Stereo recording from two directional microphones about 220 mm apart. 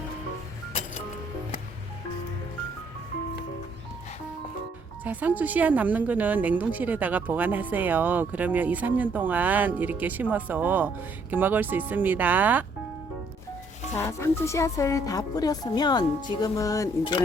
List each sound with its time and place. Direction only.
5.0 s a woman's voice: 5° right (ahead or behind)
13.9 s speech: 10° left (ahead or behind)